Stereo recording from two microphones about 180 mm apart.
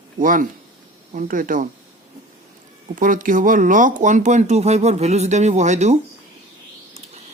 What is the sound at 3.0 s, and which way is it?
Speech, 50° right (ahead or behind).